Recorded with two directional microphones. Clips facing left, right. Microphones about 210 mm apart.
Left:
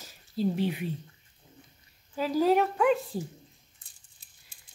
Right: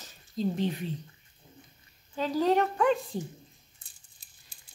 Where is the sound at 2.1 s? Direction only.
5° left (ahead or behind).